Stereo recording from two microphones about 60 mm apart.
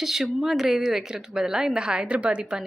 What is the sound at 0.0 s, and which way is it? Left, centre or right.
Speech, centre.